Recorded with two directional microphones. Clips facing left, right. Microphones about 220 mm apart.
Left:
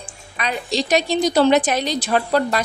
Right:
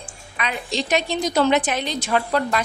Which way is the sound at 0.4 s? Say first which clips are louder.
Left 3 dB; 35° left (ahead or behind).